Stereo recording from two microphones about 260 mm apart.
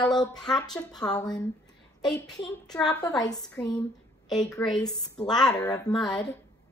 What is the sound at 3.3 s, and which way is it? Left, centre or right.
Speech, centre.